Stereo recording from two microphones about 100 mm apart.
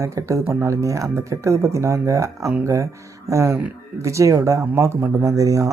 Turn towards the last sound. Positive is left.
turn(degrees=-35)  # may be behind; listen again after turning